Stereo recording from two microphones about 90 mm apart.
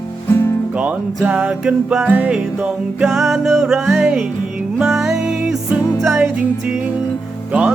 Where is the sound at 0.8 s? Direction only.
15° right (ahead or behind).